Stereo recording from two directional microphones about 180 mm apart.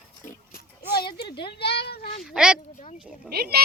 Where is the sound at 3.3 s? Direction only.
60° right (ahead or behind).